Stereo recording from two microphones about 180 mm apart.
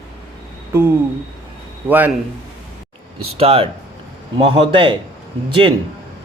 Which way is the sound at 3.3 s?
30° right (ahead or behind).